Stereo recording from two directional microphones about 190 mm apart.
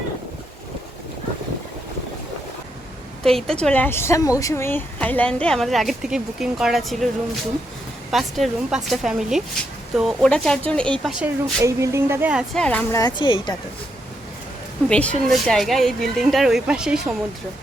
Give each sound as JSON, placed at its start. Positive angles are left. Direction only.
{"t": 3.2, "sound": "a woman's voice", "side_deg": 0}
{"t": 8.1, "sound": "a woman's voice", "side_deg": 0}
{"t": 11.6, "sound": "speech", "side_deg": -15}
{"t": 12.6, "sound": "speech", "side_deg": 10}
{"t": 13.0, "sound": "a woman's voice", "side_deg": 25}
{"t": 14.8, "sound": "a woman's voice", "side_deg": 5}